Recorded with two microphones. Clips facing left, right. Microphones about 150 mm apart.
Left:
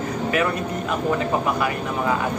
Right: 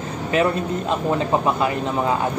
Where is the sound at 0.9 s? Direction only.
25° right (ahead or behind).